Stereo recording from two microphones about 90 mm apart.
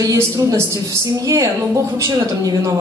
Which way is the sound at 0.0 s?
40° right (ahead or behind).